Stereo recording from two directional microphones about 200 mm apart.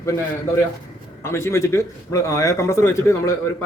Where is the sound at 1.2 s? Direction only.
15° left (ahead or behind).